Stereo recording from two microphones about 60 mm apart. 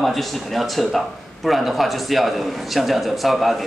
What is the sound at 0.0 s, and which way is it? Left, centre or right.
A man's voice, centre.